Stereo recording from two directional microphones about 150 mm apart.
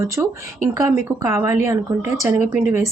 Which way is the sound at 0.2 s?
15° right (ahead or behind).